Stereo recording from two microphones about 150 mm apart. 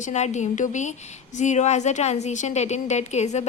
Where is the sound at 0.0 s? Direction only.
50° left (ahead or behind).